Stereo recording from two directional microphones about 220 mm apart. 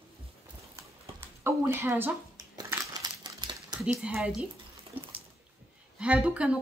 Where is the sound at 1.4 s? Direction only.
10° right (ahead or behind).